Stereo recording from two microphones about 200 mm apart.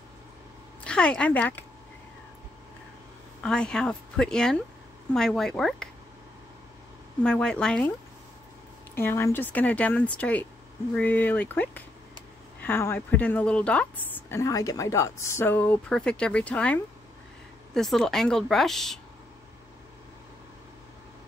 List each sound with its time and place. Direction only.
0.8 s speech: 5° left (ahead or behind)
3.4 s speech: 5° left (ahead or behind)
7.2 s speech: 5° left (ahead or behind)
8.9 s a woman's voice: 10° left (ahead or behind)